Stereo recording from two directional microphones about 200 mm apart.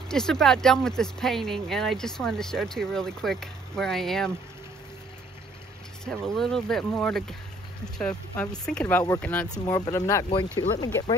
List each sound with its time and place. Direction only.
0.1 s speech: centre (ahead or behind)
6.0 s speech: centre (ahead or behind)
9.5 s speech: 20° left (ahead or behind)